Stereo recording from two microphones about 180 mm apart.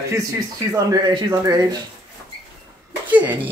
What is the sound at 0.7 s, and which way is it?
Speech, 20° right (ahead or behind).